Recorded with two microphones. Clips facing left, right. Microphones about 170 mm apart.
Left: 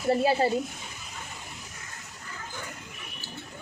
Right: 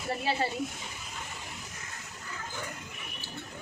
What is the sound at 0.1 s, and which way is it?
Speech, 35° left (ahead or behind).